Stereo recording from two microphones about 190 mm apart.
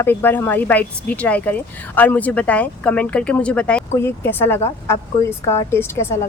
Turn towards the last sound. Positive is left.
turn(degrees=15)  # may be behind; listen again after turning